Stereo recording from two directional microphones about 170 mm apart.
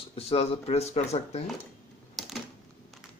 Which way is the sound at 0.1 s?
35° left (ahead or behind).